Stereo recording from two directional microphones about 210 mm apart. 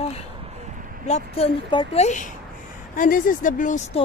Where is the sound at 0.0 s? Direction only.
30° left (ahead or behind).